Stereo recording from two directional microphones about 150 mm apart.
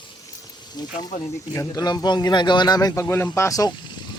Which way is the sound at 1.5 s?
25° left (ahead or behind).